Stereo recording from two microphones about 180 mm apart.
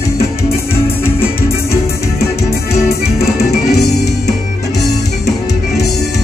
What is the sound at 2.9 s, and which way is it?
Music, 60° left (ahead or behind).